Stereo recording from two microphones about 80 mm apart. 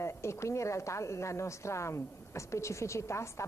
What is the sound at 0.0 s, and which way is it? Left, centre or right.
Speech, left.